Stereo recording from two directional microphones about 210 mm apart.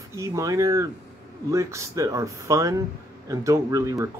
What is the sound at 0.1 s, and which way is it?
Speech, 15° right (ahead or behind).